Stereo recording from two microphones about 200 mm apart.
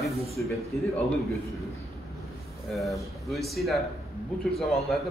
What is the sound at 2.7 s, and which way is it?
Speech, centre (ahead or behind).